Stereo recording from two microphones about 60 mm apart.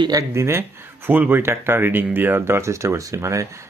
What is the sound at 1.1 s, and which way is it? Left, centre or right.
Speech, right.